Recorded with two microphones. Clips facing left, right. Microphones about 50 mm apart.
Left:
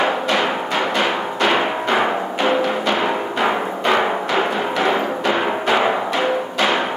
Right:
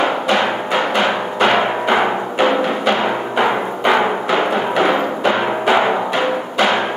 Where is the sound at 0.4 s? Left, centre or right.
Centre.